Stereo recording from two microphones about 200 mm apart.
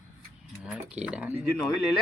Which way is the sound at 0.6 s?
5° right (ahead or behind).